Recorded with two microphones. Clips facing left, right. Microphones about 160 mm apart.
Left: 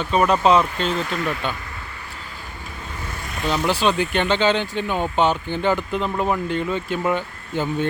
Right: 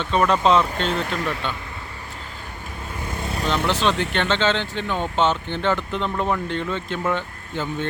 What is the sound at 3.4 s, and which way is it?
Speech, 10° left (ahead or behind).